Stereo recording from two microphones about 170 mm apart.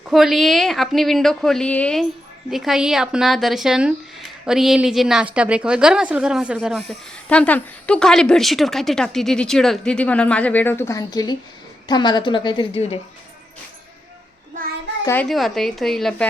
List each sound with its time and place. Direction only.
0.0 s a woman's voice: centre (ahead or behind); by 13.0 s 35° left (ahead or behind)
15.0 s speech: 10° left (ahead or behind)
15.3 s speech: centre (ahead or behind)